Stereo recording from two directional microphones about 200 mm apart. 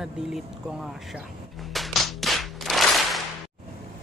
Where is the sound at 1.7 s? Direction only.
Centre (ahead or behind).